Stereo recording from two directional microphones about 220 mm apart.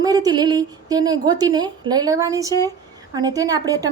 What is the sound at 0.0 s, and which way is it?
A woman's voice, 15° right (ahead or behind).